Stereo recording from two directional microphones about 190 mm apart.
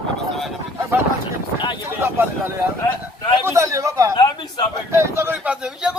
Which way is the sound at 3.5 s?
15° right (ahead or behind).